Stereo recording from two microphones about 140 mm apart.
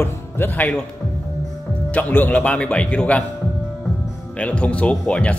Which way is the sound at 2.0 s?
10° left (ahead or behind).